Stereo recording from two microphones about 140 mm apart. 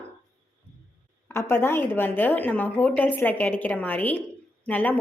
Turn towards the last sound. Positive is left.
turn(degrees=10)  # may be behind; listen again after turning